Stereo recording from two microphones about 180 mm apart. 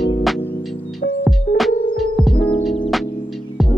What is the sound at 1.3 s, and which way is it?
Music, centre (ahead or behind).